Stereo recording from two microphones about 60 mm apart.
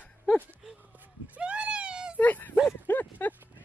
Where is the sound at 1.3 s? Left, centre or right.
Centre.